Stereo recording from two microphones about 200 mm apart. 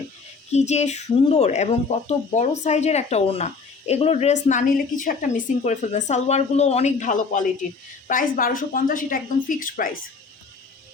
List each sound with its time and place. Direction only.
0.5 s a woman's voice: 35° left (ahead or behind)